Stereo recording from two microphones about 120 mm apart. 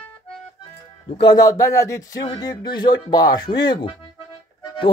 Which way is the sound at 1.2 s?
35° left (ahead or behind).